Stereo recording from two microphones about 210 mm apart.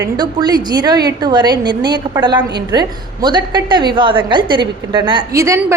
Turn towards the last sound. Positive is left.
turn(degrees=-15)  # may be behind; listen again after turning